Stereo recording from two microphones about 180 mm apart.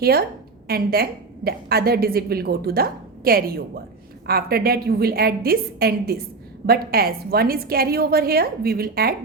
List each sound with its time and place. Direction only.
0.0 s a woman's voice: 60° right (ahead or behind)